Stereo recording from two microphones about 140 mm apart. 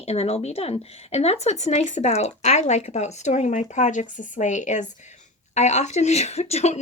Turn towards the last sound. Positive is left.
turn(degrees=50)  # may be behind; listen again after turning